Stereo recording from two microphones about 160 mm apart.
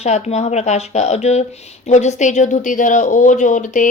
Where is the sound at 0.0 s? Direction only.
45° left (ahead or behind).